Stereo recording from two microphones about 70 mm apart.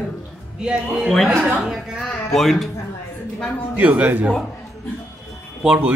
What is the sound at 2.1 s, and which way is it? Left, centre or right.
Speech, centre.